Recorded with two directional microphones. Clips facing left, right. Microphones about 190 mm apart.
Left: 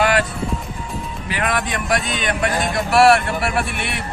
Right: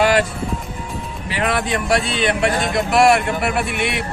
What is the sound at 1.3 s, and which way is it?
Speech, 30° right (ahead or behind).